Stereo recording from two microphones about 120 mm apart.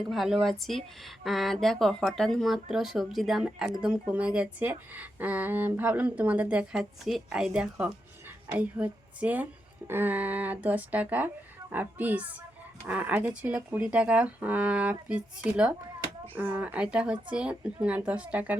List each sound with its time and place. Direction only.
0.1 s speech: centre (ahead or behind)